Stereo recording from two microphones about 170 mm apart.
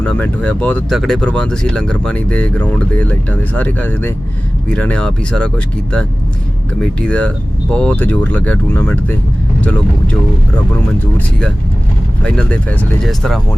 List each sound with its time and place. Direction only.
0.0 s speech: 5° left (ahead or behind)
12.2 s speech: 5° left (ahead or behind)